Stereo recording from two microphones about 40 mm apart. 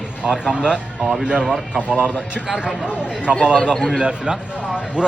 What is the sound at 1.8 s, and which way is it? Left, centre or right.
Speech, right.